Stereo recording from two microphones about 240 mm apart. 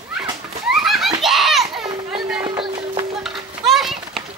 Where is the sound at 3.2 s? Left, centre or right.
Centre.